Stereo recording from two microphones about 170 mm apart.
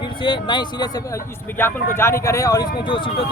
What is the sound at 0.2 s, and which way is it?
Speech, 30° left (ahead or behind).